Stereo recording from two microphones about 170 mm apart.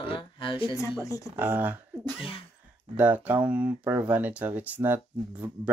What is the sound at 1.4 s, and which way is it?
Speech, 10° right (ahead or behind).